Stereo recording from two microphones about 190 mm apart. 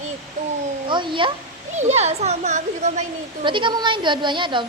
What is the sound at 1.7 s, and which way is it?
A woman's voice, 35° right (ahead or behind).